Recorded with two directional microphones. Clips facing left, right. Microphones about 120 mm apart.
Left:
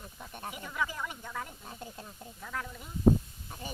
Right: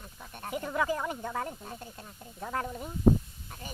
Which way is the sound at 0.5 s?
45° right (ahead or behind).